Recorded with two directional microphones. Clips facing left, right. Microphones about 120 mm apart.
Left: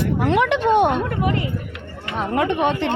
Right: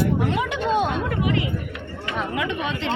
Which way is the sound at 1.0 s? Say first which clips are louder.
Left 1 dB; 45° left (ahead or behind).